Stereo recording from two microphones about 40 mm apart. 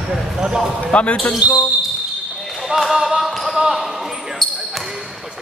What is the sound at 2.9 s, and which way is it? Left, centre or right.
Basketball bounce, centre.